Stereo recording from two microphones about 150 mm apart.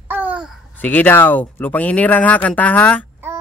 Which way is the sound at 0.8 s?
10° left (ahead or behind).